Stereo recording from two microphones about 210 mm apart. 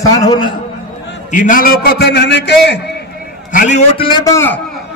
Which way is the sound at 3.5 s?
35° left (ahead or behind).